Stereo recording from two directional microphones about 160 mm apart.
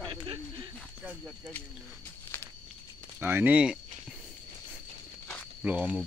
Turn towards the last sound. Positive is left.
turn(degrees=-10)  # may be behind; listen again after turning